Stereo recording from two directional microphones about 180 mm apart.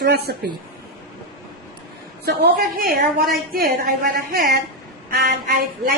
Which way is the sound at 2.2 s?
60° right (ahead or behind).